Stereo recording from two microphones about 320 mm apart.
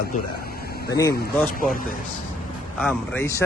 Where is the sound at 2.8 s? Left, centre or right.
Centre.